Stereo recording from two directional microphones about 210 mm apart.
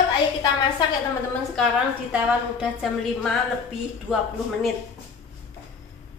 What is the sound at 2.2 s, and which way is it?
A woman's voice, 5° right (ahead or behind).